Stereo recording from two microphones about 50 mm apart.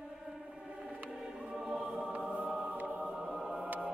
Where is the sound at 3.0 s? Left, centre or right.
Centre.